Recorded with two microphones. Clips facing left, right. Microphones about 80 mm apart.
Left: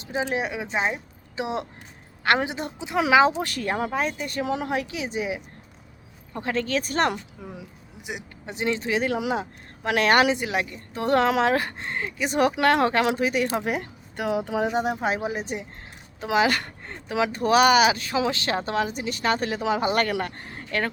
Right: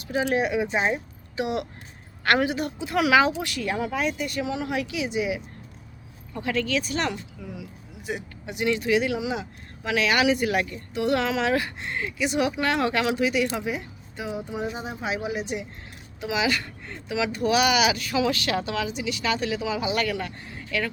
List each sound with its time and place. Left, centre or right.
0.0 s a woman's voice: left
8.1 s speech: centre
8.4 s a woman's voice: left
10.3 s speech: left
10.9 s a woman's voice: left
12.8 s a woman's voice: left
13.7 s speech: left
15.0 s a woman's voice: left